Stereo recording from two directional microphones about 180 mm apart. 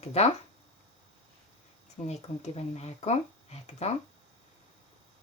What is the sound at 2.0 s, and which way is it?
Speech, 35° left (ahead or behind).